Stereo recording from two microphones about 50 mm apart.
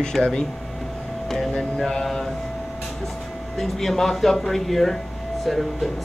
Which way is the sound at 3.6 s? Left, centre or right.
Centre.